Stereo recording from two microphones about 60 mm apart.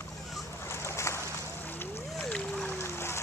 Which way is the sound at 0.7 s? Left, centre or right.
Left.